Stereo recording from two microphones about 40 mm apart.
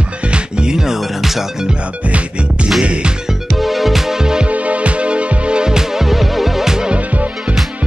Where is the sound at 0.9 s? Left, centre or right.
Centre.